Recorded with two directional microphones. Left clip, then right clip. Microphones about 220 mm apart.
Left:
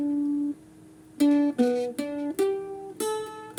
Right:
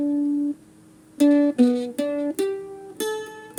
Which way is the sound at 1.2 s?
15° right (ahead or behind).